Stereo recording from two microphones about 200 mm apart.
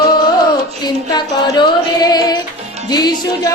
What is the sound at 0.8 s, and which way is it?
Child singing, 20° left (ahead or behind).